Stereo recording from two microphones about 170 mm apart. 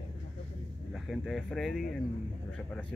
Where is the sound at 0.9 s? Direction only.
Centre (ahead or behind).